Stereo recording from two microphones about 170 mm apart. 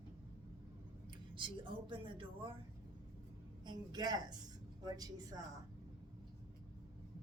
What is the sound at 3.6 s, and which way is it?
Speech, 25° right (ahead or behind).